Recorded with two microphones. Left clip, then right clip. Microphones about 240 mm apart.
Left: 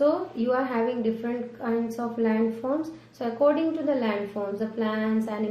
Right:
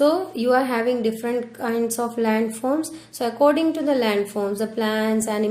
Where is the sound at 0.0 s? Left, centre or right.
Right.